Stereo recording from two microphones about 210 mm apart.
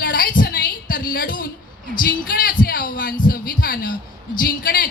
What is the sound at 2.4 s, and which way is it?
A woman's voice, 45° left (ahead or behind).